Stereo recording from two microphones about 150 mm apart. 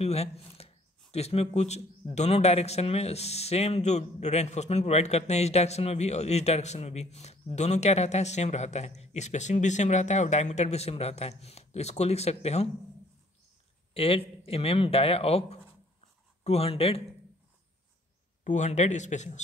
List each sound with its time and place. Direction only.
0.0 s a man's voice: 45° left (ahead or behind)
13.9 s speech: 40° left (ahead or behind)
16.4 s speech: 40° left (ahead or behind)
18.4 s a man's voice: 55° left (ahead or behind)